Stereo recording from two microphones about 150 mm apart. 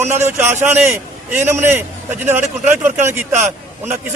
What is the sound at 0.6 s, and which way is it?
A man's voice, 15° right (ahead or behind).